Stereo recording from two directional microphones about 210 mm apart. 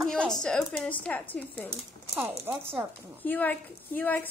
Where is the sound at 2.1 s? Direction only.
15° right (ahead or behind).